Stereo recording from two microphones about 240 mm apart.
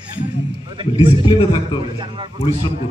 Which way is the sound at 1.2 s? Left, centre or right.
Left.